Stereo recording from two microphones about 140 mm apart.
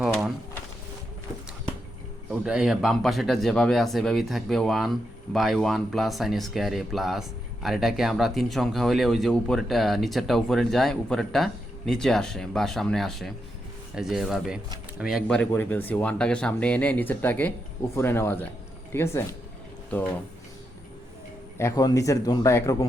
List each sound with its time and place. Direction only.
2.3 s speech: 5° right (ahead or behind)
15.3 s speech: 10° left (ahead or behind)
21.6 s speech: 25° left (ahead or behind)